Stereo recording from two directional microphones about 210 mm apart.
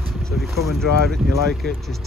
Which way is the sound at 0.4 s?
Centre (ahead or behind).